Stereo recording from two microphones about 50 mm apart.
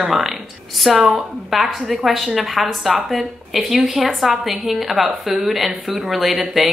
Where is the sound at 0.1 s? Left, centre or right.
Centre.